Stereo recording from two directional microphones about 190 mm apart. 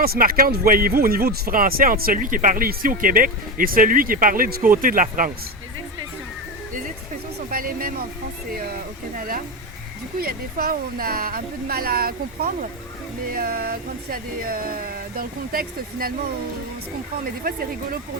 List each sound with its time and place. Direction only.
0.0 s speech: 50° right (ahead or behind)
7.5 s speech: 50° right (ahead or behind)
9.1 s speech: 50° right (ahead or behind)